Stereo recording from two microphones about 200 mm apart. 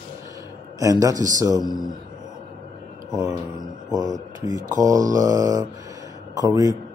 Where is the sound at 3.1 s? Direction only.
20° right (ahead or behind).